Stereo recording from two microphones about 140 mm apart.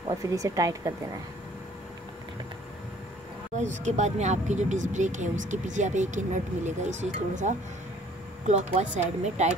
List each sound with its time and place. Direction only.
0.1 s speech: 25° right (ahead or behind)
3.5 s speech: 60° right (ahead or behind)